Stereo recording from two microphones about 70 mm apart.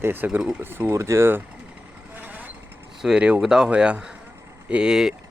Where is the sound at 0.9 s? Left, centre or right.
Right.